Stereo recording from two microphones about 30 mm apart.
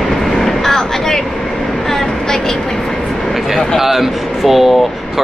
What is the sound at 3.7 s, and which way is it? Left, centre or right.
Speech, centre.